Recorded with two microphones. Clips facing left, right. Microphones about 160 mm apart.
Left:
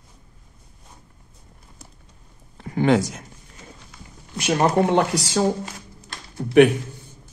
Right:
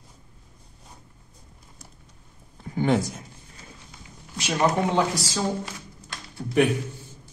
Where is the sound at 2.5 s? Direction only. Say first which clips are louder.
Left 4 dB; 80° left.